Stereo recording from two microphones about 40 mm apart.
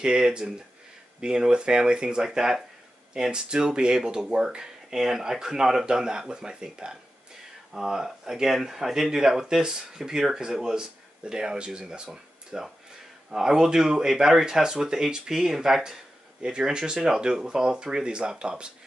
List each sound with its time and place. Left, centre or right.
0.0 s speech: centre
18.0 s speech: right